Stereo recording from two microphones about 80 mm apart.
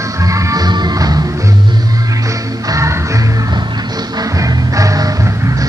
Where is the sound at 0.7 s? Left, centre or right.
Right.